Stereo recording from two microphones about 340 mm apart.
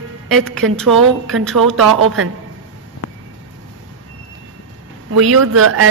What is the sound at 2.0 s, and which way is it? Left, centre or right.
Speech, right.